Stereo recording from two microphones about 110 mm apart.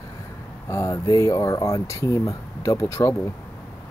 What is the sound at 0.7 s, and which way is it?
Speech, 30° left (ahead or behind).